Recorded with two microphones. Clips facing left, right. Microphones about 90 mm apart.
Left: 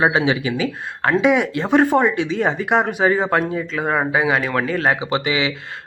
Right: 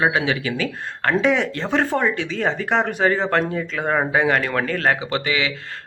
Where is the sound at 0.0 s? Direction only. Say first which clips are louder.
Left 3 dB; 20° left (ahead or behind).